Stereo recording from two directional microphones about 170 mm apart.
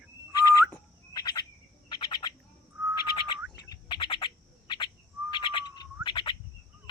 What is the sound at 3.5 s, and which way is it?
Bird, 25° left (ahead or behind).